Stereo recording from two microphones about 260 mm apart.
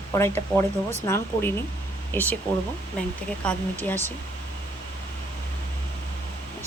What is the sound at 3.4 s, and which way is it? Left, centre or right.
Speech, centre.